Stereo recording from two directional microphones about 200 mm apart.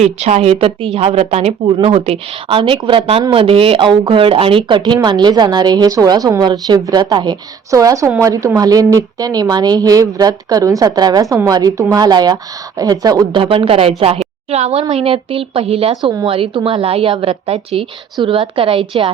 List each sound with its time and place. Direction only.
0.0 s a woman's voice: 35° right (ahead or behind)